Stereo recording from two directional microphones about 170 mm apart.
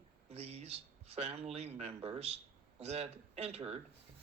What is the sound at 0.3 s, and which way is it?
Speech, 40° right (ahead or behind).